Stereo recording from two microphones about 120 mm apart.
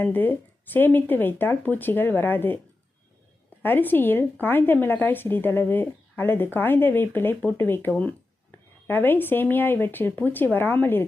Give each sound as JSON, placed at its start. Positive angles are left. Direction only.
{"t": 0.0, "sound": "a woman's voice", "side_deg": 15}
{"t": 3.6, "sound": "a woman's voice", "side_deg": 15}